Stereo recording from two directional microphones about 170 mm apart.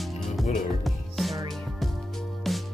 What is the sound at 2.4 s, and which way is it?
Music, centre (ahead or behind).